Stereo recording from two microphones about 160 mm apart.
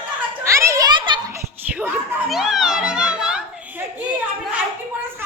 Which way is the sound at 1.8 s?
10° right (ahead or behind).